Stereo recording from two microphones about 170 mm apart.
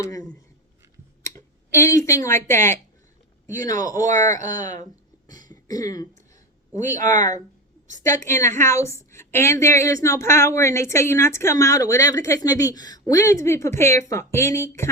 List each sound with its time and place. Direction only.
0.0 s a sound: 20° left (ahead or behind)
1.3 s speech: 15° left (ahead or behind)
3.4 s a man's voice: 50° right (ahead or behind)
3.7 s speech: 20° left (ahead or behind)
4.0 s speech: 50° right (ahead or behind)
5.6 s speech: 20° left (ahead or behind)
6.7 s speech: 45° right (ahead or behind)
8.0 s a woman's voice: 15° left (ahead or behind)